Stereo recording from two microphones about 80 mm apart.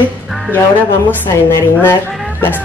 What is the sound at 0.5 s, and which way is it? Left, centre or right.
Speech, left.